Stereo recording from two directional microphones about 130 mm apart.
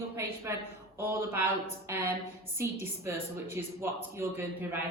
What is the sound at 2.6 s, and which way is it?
A woman's voice, 20° right (ahead or behind).